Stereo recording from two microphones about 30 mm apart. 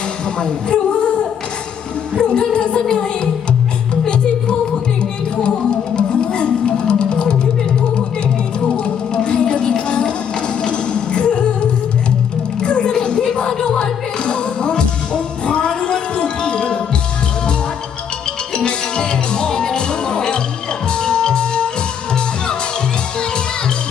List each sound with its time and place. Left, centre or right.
0.3 s speech: left
2.1 s music: left
5.4 s music: left
8.7 s music: left
18.5 s music: left